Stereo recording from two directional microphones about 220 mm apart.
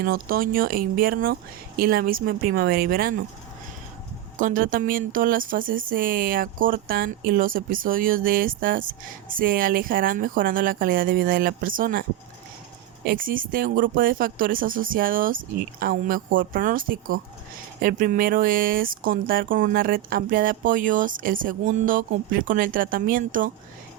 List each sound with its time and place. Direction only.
0.0 s speech: 40° right (ahead or behind)
4.4 s speech: 35° right (ahead or behind)
13.1 s speech: 40° right (ahead or behind)